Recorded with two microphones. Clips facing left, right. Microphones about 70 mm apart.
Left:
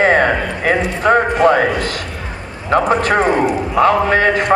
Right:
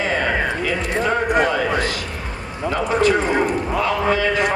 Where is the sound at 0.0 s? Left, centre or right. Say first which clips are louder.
Left 7 dB; left.